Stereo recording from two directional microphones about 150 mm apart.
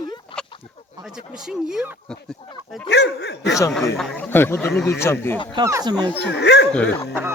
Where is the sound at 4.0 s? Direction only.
10° left (ahead or behind).